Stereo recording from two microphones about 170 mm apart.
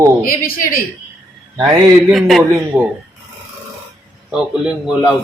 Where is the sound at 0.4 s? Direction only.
60° left (ahead or behind).